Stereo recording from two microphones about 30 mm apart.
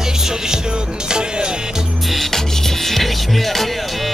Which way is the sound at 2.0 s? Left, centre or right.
Centre.